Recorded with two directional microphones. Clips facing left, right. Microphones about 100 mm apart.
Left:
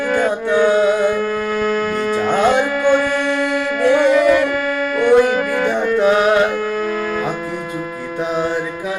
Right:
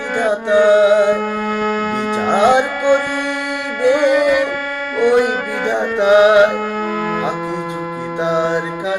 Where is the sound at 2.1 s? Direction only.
20° right (ahead or behind).